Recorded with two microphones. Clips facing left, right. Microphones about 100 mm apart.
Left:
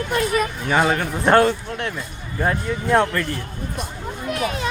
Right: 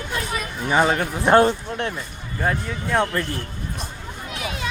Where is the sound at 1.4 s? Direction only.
25° right (ahead or behind).